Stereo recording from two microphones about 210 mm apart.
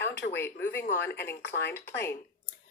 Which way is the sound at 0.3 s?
10° left (ahead or behind).